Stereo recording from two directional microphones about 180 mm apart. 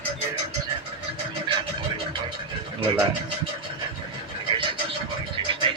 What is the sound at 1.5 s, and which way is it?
Scratching, 25° right (ahead or behind).